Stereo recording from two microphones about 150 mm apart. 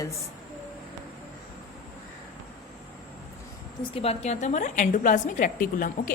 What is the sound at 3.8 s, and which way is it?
A woman's voice, 40° left (ahead or behind).